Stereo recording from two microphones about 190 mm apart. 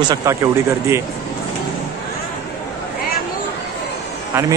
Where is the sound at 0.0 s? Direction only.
20° right (ahead or behind).